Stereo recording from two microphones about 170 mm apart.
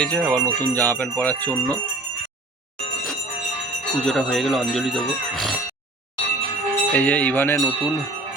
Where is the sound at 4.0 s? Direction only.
Centre (ahead or behind).